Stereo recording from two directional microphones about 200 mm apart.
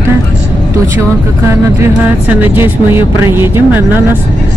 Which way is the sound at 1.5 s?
10° right (ahead or behind).